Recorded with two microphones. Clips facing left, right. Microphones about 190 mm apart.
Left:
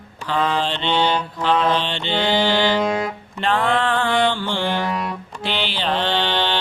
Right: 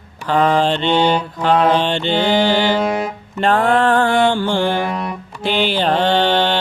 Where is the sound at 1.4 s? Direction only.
50° right (ahead or behind).